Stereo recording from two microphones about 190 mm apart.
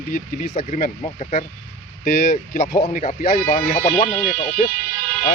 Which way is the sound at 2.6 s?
20° left (ahead or behind).